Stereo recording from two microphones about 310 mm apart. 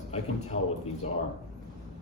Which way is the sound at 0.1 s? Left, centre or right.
Left.